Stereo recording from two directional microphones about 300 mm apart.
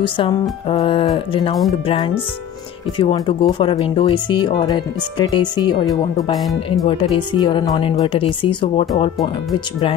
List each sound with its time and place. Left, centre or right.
0.0 s speech: centre
3.0 s speech: centre